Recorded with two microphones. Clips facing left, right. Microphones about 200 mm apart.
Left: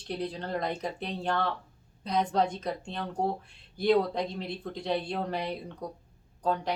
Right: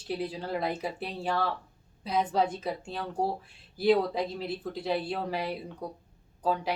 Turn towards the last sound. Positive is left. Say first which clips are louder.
# even
turn(degrees=-5)  # may be behind; listen again after turning